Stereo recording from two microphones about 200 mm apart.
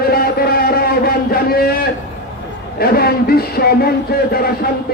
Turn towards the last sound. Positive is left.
turn(degrees=50)  # may be behind; listen again after turning